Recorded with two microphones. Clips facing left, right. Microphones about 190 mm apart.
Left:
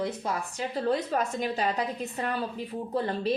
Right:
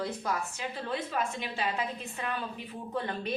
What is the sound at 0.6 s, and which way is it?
A woman's voice, 40° left (ahead or behind).